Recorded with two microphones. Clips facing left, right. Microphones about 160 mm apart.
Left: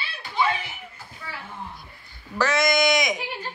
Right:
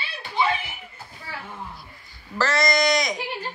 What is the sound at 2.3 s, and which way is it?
Speech, centre (ahead or behind).